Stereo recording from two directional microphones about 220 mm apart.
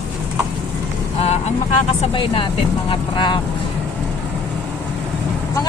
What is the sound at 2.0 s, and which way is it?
Speech, 25° left (ahead or behind).